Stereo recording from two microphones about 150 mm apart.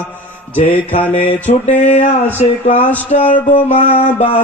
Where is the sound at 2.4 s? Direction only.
50° left (ahead or behind).